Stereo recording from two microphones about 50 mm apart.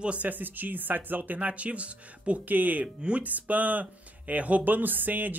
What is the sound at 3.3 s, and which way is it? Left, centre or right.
Speech, right.